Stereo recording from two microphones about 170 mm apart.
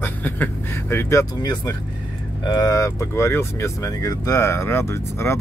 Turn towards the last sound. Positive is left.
turn(degrees=15)  # may be behind; listen again after turning